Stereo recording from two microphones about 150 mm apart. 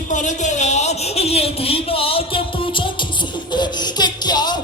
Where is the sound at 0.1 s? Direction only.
55° left (ahead or behind).